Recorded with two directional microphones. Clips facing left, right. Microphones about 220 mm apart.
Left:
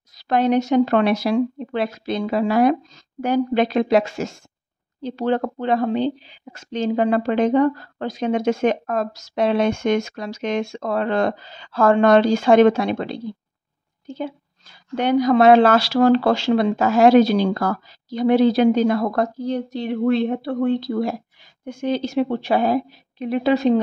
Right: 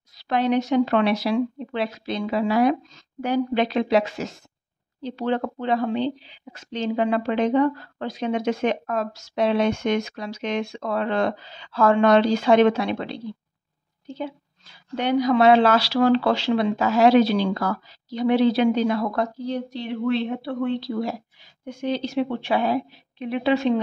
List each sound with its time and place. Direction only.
0.1 s a woman's voice: 45° left (ahead or behind)